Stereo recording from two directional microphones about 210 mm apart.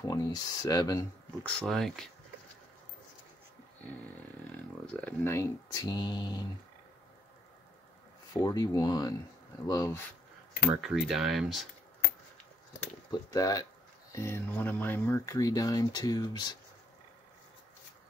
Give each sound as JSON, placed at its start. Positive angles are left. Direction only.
{"t": 0.0, "sound": "speech", "side_deg": 15}
{"t": 1.4, "sound": "speech", "side_deg": 5}
{"t": 4.5, "sound": "speech", "side_deg": 5}
{"t": 8.3, "sound": "speech", "side_deg": 15}
{"t": 10.7, "sound": "speech", "side_deg": 0}
{"t": 13.1, "sound": "speech", "side_deg": 15}